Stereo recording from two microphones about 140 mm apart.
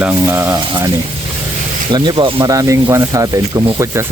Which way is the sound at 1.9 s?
30° right (ahead or behind).